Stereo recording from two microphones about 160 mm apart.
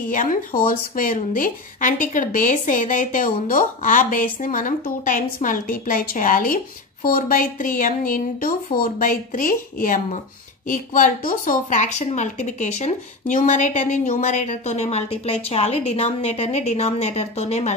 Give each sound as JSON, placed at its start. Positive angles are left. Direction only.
{"t": 0.1, "sound": "a woman's voice", "side_deg": 55}